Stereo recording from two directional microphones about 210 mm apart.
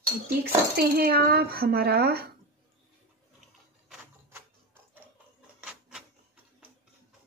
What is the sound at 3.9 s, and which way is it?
Typewriter, 10° right (ahead or behind).